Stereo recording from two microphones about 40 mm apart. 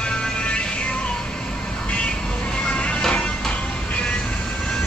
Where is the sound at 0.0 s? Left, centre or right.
Left.